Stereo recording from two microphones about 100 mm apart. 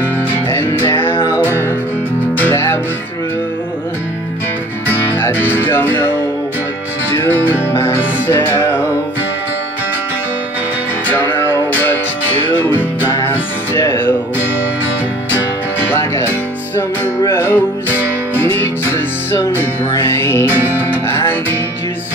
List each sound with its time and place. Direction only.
0.5 s music: 25° left (ahead or behind)
2.3 s music: 20° left (ahead or behind)
4.8 s music: 20° left (ahead or behind)
11.1 s music: 25° left (ahead or behind)
15.9 s music: 25° left (ahead or behind)
17.9 s music: 20° right (ahead or behind)
18.4 s music: 20° left (ahead or behind)
20.5 s music: 20° right (ahead or behind)
21.1 s music: 25° left (ahead or behind)